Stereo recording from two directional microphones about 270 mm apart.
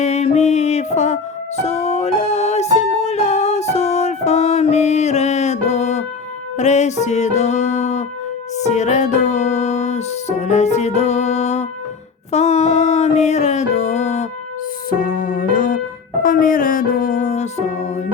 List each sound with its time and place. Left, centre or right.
0.0 s music: left